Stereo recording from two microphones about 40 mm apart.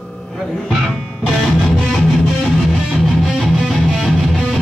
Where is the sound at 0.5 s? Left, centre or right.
Centre.